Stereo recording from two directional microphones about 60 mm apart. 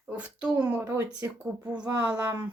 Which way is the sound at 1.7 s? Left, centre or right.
Centre.